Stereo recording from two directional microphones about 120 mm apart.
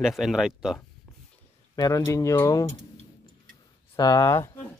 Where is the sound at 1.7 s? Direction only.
30° left (ahead or behind).